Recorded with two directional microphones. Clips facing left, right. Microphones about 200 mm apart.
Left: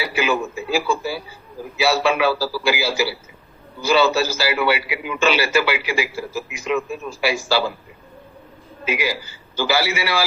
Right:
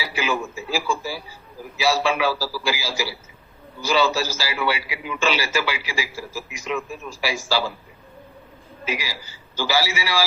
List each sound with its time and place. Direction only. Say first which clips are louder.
0.0 s radio: left 4 dB; 60° left (ahead or behind)
1.8 s a man's voice: left 3 dB; 60° left (ahead or behind)
8.9 s a man's voice: left 6 dB; 55° left (ahead or behind)